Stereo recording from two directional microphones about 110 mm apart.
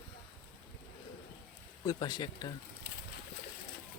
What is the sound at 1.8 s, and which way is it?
Speech, 40° left (ahead or behind).